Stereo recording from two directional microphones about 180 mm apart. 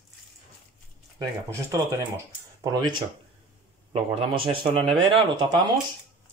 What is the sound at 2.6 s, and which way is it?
Speech, 20° right (ahead or behind).